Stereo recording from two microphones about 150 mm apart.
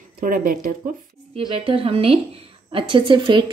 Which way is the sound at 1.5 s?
35° right (ahead or behind).